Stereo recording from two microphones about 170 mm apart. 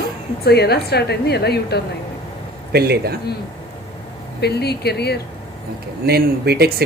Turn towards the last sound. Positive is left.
turn(degrees=-70)  # may be behind; listen again after turning